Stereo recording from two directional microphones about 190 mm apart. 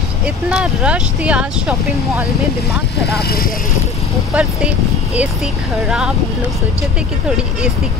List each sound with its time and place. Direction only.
0.5 s speech: 5° right (ahead or behind)
3.2 s speech: 55° left (ahead or behind)
4.3 s speech: 5° right (ahead or behind)